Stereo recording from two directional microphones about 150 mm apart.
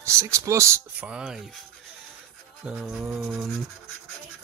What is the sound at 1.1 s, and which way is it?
Speech, 5° right (ahead or behind).